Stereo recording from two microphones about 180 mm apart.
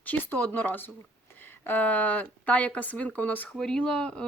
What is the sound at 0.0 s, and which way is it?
Speech, 10° left (ahead or behind).